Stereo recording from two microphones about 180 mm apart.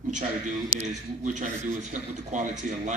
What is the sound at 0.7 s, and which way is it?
A man's voice, 45° right (ahead or behind).